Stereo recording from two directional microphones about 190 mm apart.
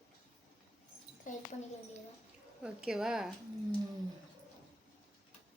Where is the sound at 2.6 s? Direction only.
5° right (ahead or behind).